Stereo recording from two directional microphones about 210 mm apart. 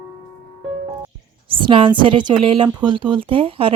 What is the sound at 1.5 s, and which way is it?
Speech, 25° right (ahead or behind).